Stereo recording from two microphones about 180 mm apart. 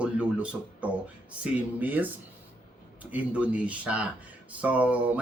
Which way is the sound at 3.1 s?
5° right (ahead or behind).